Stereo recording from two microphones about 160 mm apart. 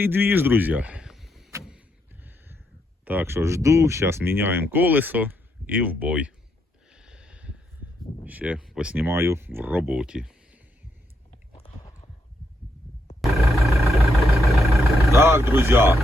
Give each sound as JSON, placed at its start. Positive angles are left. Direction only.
{"t": 0.0, "sound": "a man's voice", "side_deg": -15}
{"t": 3.0, "sound": "speech", "side_deg": -10}
{"t": 6.9, "sound": "snort", "side_deg": -5}
{"t": 8.2, "sound": "speech", "side_deg": -10}
{"t": 13.2, "sound": "a sound", "side_deg": 0}
{"t": 13.9, "sound": "vehicle", "side_deg": 0}
{"t": 15.1, "sound": "speech", "side_deg": -15}